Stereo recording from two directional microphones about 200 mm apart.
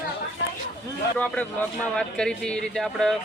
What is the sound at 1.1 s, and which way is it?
Speech, 5° left (ahead or behind).